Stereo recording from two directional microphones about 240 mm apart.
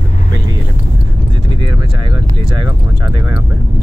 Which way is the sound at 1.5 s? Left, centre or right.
Right.